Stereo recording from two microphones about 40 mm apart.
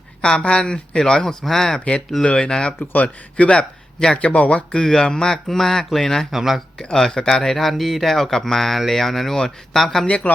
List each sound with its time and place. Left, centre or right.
0.2 s speech: left
2.2 s speech: left
2.9 s speech: left
4.9 s speech: centre
6.3 s speech: centre
6.9 s speech: centre
7.4 s speech: centre